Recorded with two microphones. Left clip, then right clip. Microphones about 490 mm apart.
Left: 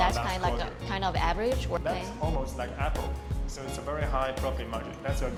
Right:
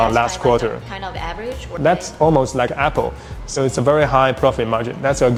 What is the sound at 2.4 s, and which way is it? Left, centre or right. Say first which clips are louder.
Speech: right 16 dB; right.